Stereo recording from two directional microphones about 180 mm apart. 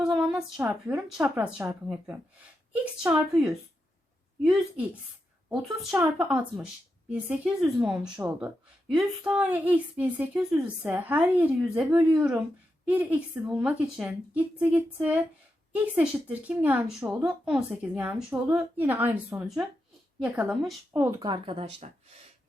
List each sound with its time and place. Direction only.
0.2 s speech: 5° right (ahead or behind)
3.0 s a woman's voice: 5° right (ahead or behind)
8.1 s speech: 20° right (ahead or behind)
8.4 s a woman's voice: 5° right (ahead or behind)
20.9 s speech: 20° right (ahead or behind); by 21.9 s 35° right (ahead or behind)